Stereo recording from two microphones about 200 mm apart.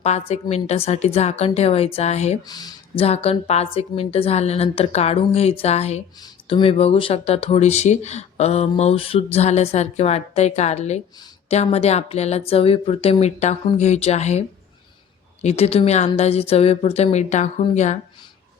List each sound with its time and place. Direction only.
0.0 s speech: 30° left (ahead or behind)
2.5 s speech: 20° left (ahead or behind); by 17.9 s 35° left (ahead or behind)